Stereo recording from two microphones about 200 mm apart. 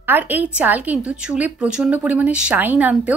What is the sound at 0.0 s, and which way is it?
A woman's voice, 10° right (ahead or behind).